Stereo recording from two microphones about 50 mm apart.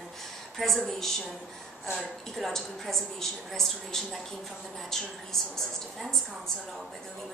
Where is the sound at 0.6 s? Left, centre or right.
Centre.